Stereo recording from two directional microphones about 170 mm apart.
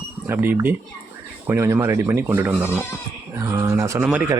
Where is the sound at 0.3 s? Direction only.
15° right (ahead or behind).